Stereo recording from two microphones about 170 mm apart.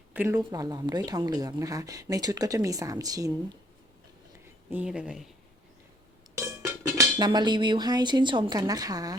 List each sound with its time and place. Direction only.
0.1 s a sound: 10° right (ahead or behind)
0.3 s speech: 20° right (ahead or behind)
4.7 s speech: 5° right (ahead or behind)
6.9 s speech: 25° right (ahead or behind)